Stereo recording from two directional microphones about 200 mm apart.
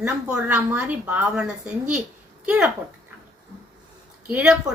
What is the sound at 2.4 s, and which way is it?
Speech, 5° right (ahead or behind).